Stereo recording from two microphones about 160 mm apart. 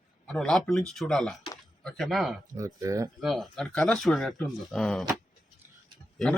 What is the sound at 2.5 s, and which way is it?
Speech, 20° right (ahead or behind).